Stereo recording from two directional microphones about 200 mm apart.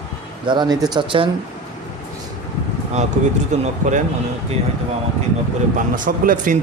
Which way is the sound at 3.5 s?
35° right (ahead or behind).